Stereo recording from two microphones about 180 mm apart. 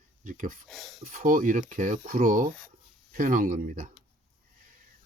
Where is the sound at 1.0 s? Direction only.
50° right (ahead or behind).